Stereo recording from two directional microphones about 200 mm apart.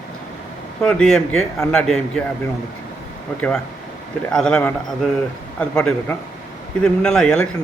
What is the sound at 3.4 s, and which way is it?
A man's voice, 5° left (ahead or behind).